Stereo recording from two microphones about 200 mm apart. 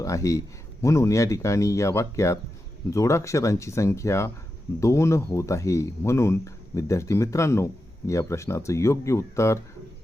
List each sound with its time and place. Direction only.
0.0 s speech: 15° left (ahead or behind)